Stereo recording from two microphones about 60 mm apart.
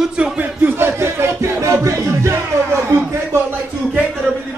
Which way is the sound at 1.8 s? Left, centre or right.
Right.